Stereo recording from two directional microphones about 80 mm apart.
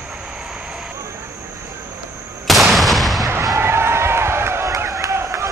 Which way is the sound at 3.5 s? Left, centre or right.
Right.